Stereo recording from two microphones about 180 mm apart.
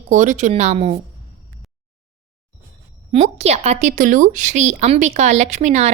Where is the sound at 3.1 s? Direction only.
35° right (ahead or behind).